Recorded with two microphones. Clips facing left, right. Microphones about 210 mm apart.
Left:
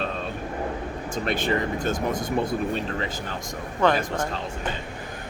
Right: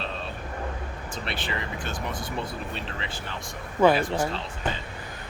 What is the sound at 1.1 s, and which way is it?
Speech, 45° left (ahead or behind).